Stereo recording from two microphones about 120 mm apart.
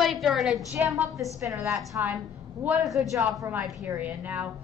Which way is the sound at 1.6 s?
25° right (ahead or behind).